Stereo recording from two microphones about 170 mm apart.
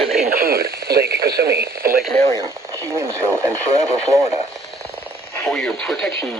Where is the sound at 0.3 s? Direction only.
60° right (ahead or behind).